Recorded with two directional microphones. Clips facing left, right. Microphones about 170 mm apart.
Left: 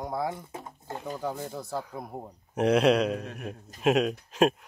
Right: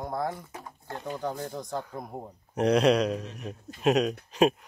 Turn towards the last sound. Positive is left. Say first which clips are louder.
# right 1 dB
turn(degrees=0)  # may be behind; listen again after turning